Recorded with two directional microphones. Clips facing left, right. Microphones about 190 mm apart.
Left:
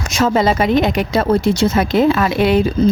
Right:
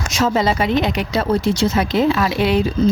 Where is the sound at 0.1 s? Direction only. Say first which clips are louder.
Left 3 dB; 50° left (ahead or behind).